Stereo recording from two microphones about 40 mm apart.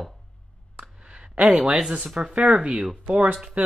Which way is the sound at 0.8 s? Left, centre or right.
Right.